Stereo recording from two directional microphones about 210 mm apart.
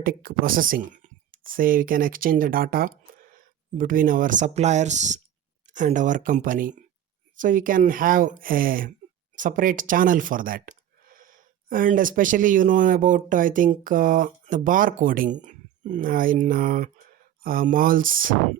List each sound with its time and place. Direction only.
0.0 s speech: 45° right (ahead or behind)